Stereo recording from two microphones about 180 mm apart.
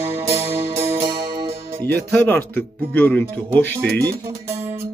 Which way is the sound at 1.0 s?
25° right (ahead or behind).